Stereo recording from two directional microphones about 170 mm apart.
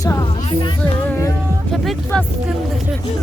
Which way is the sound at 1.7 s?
Centre (ahead or behind).